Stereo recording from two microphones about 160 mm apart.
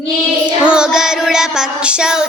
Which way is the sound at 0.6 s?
5° right (ahead or behind).